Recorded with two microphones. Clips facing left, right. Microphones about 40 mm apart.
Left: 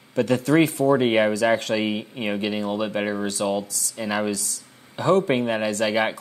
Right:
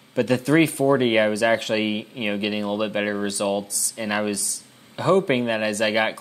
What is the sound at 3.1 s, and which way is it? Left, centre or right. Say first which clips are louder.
Speech: right 1 dB; centre.